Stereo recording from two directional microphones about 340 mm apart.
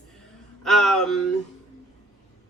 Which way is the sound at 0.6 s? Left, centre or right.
Centre.